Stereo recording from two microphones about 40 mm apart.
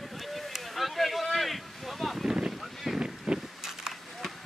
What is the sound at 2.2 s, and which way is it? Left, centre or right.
Boat, centre.